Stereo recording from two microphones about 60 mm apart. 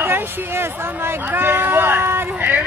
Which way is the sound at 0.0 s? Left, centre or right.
Right.